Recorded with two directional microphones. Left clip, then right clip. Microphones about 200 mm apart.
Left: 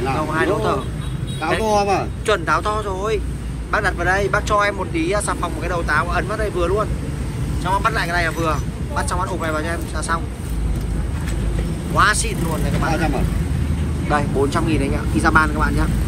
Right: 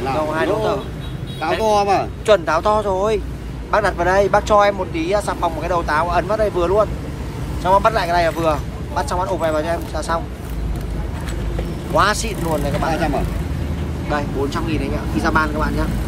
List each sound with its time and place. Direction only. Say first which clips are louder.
0.0 s speech: right 1 dB; 15° right (ahead or behind)
2.2 s speech: right 4 dB; 25° right (ahead or behind)
11.9 s speech: even; 25° right (ahead or behind)